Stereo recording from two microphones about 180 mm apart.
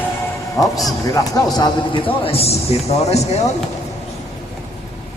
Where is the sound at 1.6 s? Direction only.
30° left (ahead or behind).